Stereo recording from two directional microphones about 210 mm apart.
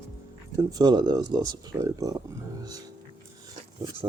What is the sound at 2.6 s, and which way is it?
Music, 20° right (ahead or behind).